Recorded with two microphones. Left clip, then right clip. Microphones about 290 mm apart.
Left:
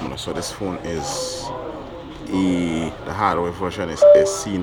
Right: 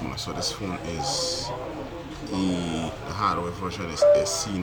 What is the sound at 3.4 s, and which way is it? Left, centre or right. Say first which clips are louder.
Speech: left 7 dB; centre.